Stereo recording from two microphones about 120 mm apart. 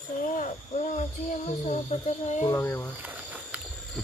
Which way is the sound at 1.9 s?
70° left (ahead or behind).